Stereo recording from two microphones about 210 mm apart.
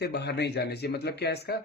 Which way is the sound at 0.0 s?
50° left (ahead or behind).